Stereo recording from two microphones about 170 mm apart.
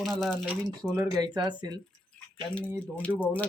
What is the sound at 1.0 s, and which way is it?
Speech, 20° right (ahead or behind).